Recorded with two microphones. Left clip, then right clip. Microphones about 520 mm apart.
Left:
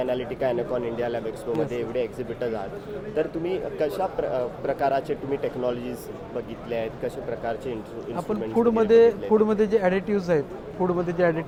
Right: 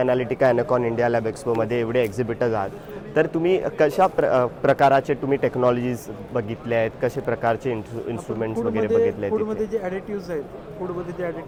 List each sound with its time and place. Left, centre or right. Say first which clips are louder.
0.0 s speech: right 6 dB; right
8.5 s speech: left 4 dB; left